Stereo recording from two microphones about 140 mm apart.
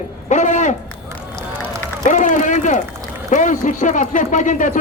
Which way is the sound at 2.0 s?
60° left (ahead or behind).